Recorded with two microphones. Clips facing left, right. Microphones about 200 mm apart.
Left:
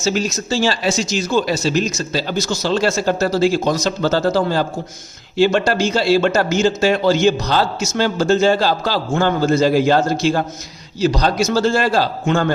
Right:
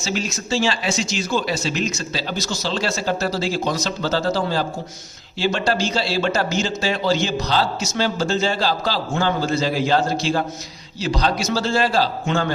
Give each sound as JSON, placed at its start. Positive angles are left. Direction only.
{"t": 0.0, "sound": "speech", "side_deg": 40}